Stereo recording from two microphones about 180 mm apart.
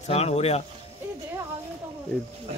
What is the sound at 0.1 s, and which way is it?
Speech, 35° left (ahead or behind).